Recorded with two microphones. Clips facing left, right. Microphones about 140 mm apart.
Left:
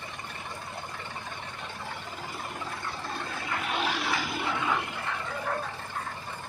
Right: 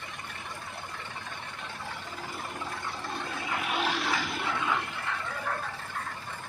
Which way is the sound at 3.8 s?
Centre (ahead or behind).